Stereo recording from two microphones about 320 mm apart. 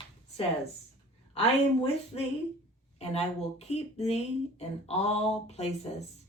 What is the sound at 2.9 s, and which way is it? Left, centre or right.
Speech, centre.